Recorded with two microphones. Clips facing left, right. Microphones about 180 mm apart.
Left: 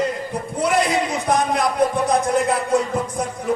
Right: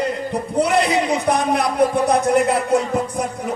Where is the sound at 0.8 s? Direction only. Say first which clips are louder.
Right 3 dB; 60° right (ahead or behind).